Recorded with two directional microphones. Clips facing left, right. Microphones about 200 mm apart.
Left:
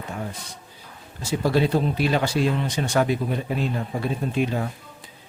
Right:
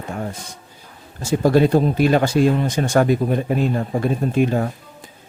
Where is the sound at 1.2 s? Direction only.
45° right (ahead or behind).